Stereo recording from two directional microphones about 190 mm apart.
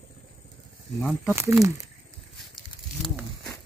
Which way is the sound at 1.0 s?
Centre (ahead or behind).